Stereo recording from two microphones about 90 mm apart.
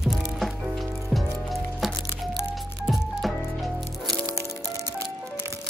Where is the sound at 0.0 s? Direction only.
Centre (ahead or behind).